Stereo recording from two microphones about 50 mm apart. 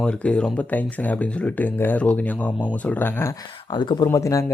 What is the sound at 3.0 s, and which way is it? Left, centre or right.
Speech, left.